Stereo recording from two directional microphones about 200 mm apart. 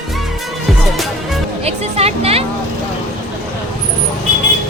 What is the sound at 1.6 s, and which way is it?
Music, 30° right (ahead or behind).